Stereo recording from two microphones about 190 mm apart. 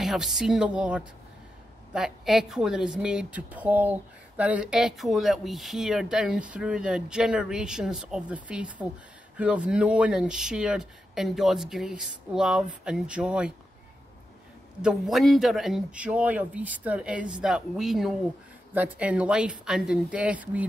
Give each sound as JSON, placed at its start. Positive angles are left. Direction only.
{"t": 0.0, "sound": "a woman's voice", "side_deg": 0}
{"t": 14.8, "sound": "a woman's voice", "side_deg": -5}